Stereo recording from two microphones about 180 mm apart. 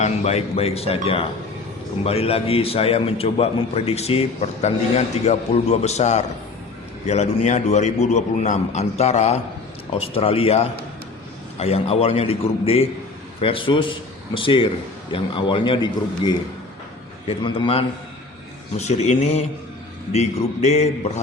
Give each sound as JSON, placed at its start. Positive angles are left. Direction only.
{"t": 0.0, "sound": "a man's voice", "side_deg": 35}